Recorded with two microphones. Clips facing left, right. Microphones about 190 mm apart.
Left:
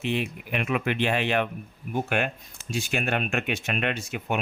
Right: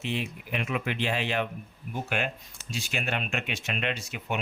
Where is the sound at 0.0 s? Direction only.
60° left (ahead or behind).